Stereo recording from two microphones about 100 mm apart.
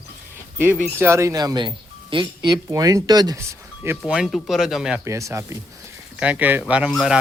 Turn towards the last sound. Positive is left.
turn(degrees=-5)  # may be behind; listen again after turning